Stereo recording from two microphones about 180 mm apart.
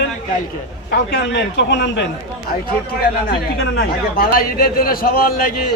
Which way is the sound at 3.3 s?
60° left (ahead or behind).